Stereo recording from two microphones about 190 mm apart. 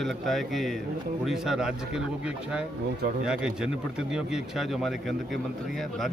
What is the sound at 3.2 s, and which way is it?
Speech, 5° right (ahead or behind).